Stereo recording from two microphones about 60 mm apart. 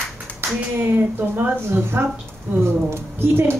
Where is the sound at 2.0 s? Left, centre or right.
Right.